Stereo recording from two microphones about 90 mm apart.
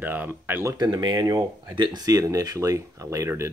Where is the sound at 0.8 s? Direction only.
50° right (ahead or behind); by 3.3 s 35° right (ahead or behind).